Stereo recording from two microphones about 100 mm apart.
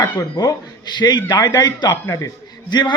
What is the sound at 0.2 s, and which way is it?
A man's voice, 40° left (ahead or behind).